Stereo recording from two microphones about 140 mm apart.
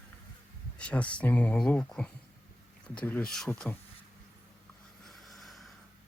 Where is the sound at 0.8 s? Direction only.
10° left (ahead or behind).